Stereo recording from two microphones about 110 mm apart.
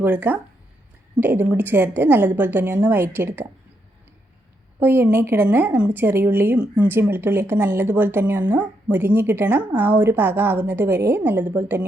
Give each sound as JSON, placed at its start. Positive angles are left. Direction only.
{"t": 0.0, "sound": "a woman's voice", "side_deg": -15}
{"t": 4.8, "sound": "a woman's voice", "side_deg": -20}